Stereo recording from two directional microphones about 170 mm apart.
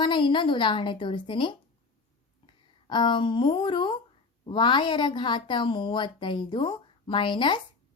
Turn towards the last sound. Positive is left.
turn(degrees=25)  # may be behind; listen again after turning